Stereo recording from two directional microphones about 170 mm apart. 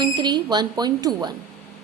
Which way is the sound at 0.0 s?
25° right (ahead or behind).